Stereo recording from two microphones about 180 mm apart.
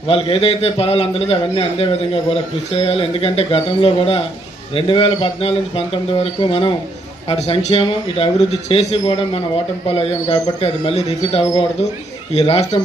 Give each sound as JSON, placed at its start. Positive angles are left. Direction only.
{"t": 0.1, "sound": "speech", "side_deg": 30}